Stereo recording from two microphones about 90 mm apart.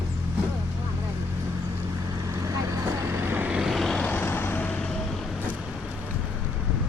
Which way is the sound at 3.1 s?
25° right (ahead or behind).